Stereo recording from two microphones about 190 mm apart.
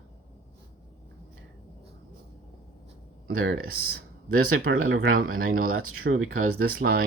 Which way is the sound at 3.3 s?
75° right (ahead or behind).